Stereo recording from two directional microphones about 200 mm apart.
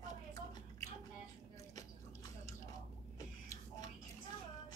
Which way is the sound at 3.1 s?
15° left (ahead or behind).